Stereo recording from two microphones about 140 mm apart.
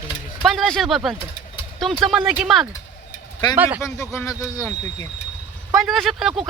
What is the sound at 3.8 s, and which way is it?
Speech, 20° left (ahead or behind).